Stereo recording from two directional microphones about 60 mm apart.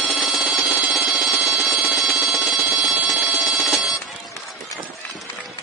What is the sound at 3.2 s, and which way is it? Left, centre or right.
Alarm clock, right.